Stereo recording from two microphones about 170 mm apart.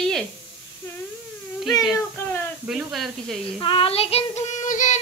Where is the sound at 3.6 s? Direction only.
30° left (ahead or behind); by 5.0 s 45° left (ahead or behind).